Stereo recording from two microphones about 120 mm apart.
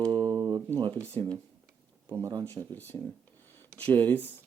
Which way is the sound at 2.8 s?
15° left (ahead or behind).